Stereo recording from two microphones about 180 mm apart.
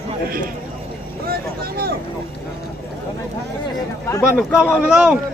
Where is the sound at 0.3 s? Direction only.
50° right (ahead or behind).